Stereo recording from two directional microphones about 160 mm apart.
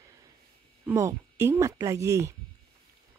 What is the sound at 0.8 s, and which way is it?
Speech, 15° right (ahead or behind).